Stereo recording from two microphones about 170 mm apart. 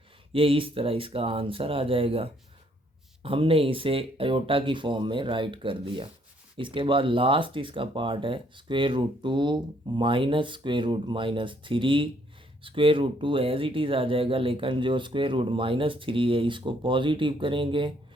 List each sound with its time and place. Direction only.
0.3 s speech: 30° right (ahead or behind)